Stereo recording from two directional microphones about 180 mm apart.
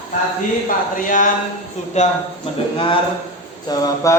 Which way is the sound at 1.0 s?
45° left (ahead or behind).